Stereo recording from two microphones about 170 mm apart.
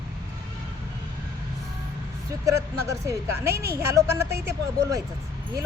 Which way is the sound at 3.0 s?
15° right (ahead or behind).